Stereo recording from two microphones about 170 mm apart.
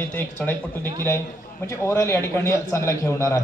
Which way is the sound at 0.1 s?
10° left (ahead or behind).